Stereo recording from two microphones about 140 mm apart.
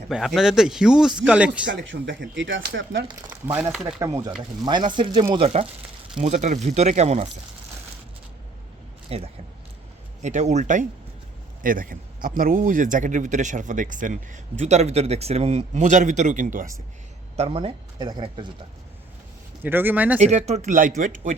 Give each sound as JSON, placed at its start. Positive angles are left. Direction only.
{"t": 0.1, "sound": "speech", "side_deg": -5}
{"t": 1.9, "sound": "speech", "side_deg": -90}
{"t": 3.2, "sound": "speech", "side_deg": -15}
{"t": 3.7, "sound": "speech", "side_deg": -5}
{"t": 4.6, "sound": "speech", "side_deg": -30}
{"t": 6.1, "sound": "speech", "side_deg": -55}
{"t": 9.0, "sound": "speech", "side_deg": -45}
{"t": 11.6, "sound": "speech", "side_deg": -80}
{"t": 17.3, "sound": "speech", "side_deg": -45}
{"t": 19.6, "sound": "speech", "side_deg": -15}
{"t": 20.1, "sound": "speech", "side_deg": -55}
{"t": 20.7, "sound": "speech", "side_deg": -75}